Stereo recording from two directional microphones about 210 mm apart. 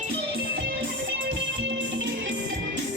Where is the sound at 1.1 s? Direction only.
60° right (ahead or behind).